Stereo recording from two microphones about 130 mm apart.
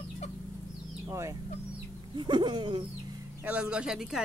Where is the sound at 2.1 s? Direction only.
35° right (ahead or behind).